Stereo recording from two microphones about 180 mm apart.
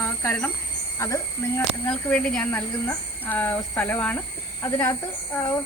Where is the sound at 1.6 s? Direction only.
5° left (ahead or behind).